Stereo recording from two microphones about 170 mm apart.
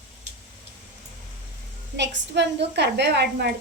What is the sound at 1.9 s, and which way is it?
A woman's voice, 90° right.